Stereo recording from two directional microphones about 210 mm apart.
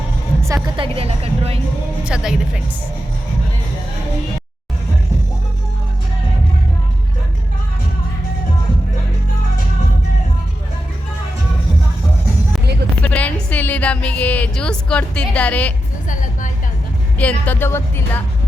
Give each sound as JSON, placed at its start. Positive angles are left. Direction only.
{"t": 0.4, "sound": "a woman's voice", "side_deg": -15}
{"t": 2.0, "sound": "speech", "side_deg": -5}
{"t": 13.0, "sound": "music", "side_deg": 5}
{"t": 17.2, "sound": "speech", "side_deg": 5}